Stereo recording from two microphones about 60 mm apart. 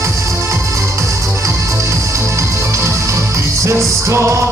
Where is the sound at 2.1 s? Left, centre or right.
Right.